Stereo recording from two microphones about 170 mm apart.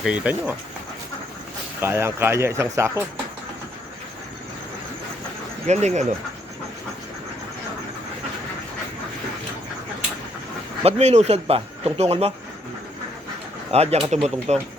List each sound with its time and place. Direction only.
0.0 s speech: 5° right (ahead or behind)
1.8 s speech: 15° right (ahead or behind)
5.6 s speech: 40° right (ahead or behind)
10.8 s speech: 40° right (ahead or behind)
13.7 s speech: 35° right (ahead or behind)